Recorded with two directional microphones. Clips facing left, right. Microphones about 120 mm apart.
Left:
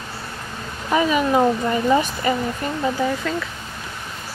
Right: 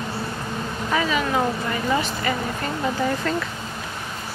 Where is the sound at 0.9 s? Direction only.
20° left (ahead or behind).